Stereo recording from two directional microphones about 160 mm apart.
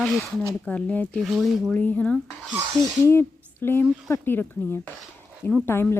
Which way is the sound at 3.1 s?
15° left (ahead or behind).